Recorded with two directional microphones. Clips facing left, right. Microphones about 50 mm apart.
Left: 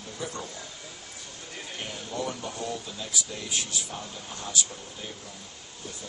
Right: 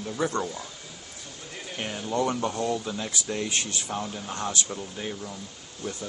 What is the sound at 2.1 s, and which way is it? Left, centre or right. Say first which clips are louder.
Speech: right 8 dB; right.